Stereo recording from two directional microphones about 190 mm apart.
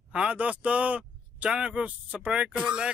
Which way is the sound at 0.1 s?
5° right (ahead or behind).